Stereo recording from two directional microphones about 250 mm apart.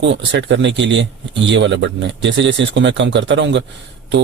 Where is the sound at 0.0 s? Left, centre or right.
Right.